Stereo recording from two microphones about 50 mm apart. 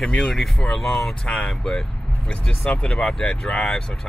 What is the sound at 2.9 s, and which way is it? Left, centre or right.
Speech, centre.